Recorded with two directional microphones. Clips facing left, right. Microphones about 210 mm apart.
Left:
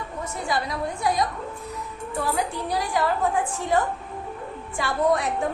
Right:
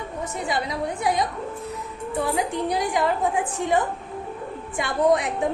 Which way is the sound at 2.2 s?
20° right (ahead or behind).